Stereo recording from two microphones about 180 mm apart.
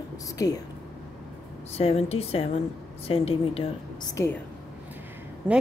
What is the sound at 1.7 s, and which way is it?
Speech, 35° left (ahead or behind).